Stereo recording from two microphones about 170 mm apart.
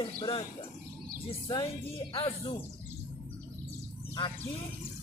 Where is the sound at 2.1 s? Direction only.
30° left (ahead or behind).